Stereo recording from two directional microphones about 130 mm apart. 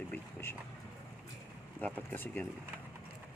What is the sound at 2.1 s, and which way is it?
Speech, 15° left (ahead or behind).